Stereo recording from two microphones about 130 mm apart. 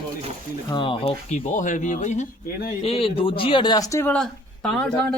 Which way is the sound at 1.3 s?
70° left (ahead or behind).